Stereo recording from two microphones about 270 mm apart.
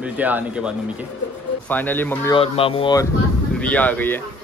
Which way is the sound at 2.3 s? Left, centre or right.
Left.